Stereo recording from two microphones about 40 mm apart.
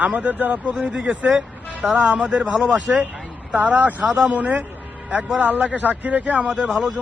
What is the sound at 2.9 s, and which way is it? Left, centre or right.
A man's voice, right.